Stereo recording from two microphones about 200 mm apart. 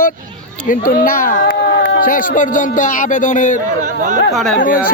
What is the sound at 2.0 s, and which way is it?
Speech, 45° left (ahead or behind).